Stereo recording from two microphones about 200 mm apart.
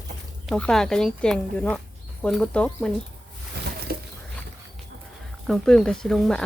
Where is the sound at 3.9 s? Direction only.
50° right (ahead or behind).